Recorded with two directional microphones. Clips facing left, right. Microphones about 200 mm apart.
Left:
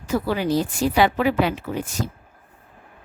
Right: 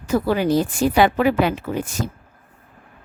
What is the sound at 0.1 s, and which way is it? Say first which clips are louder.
A woman's voice: right 3 dB; 50° right (ahead or behind).